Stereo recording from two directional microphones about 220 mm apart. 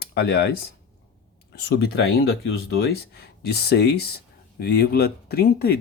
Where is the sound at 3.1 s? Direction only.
50° left (ahead or behind).